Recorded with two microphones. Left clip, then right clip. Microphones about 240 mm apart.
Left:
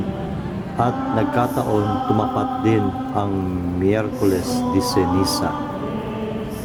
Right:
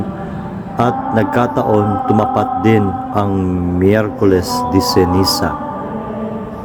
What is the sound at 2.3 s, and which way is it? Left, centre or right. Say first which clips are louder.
Music: right 6 dB; centre.